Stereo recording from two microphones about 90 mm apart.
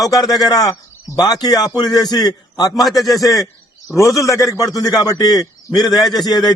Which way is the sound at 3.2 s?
40° left (ahead or behind).